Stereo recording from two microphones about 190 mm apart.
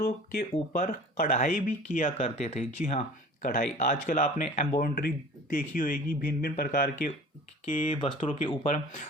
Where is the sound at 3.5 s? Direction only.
45° left (ahead or behind).